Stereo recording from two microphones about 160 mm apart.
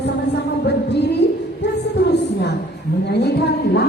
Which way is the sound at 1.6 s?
90° left.